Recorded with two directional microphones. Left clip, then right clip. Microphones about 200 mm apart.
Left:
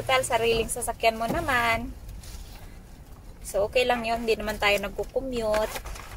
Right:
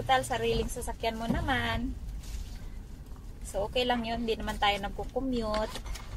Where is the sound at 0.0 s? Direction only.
20° left (ahead or behind).